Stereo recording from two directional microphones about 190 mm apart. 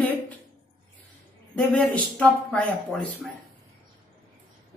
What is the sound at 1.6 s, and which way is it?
A man's voice, 5° left (ahead or behind).